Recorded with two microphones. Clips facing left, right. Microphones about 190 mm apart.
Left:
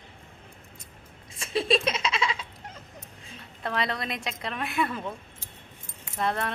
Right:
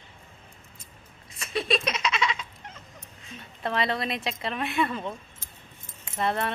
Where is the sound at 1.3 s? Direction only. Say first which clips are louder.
Left 2 dB; 30° left (ahead or behind).